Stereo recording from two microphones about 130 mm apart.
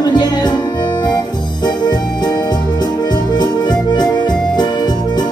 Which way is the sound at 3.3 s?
35° left (ahead or behind).